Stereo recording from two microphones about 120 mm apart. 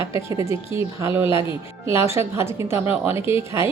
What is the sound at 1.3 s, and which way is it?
Speech, 45° left (ahead or behind).